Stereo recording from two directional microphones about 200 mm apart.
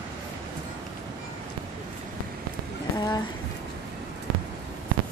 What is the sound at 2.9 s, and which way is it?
Speech, 20° left (ahead or behind).